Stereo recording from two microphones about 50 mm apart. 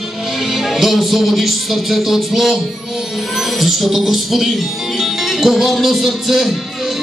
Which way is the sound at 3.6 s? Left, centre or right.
Centre.